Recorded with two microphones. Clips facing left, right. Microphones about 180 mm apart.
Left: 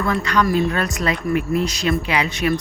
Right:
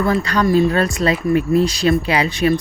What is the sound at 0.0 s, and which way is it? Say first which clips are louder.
Speech: right 3 dB; 35° right (ahead or behind).